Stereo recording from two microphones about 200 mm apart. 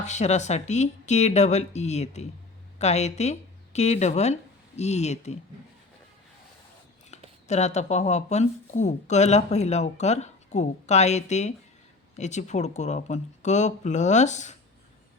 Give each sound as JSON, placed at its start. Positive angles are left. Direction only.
{"t": 0.0, "sound": "speech", "side_deg": 35}
{"t": 7.4, "sound": "speech", "side_deg": 35}